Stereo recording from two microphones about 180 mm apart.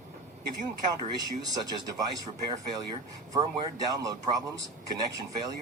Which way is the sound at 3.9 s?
20° right (ahead or behind).